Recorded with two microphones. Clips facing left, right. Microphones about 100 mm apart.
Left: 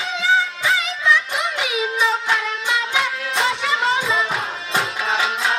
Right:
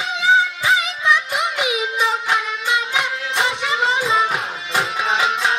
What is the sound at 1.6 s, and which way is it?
Music, 20° right (ahead or behind).